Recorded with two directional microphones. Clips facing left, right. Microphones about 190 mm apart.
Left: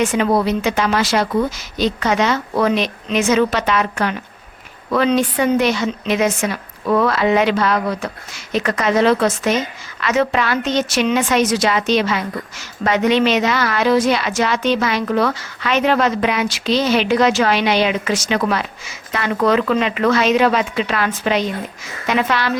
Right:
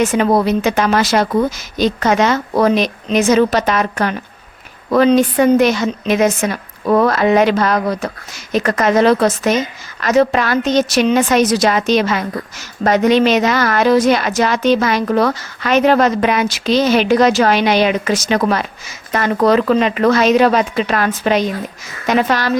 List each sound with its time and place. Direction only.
0.0 s a woman's voice: 45° right (ahead or behind)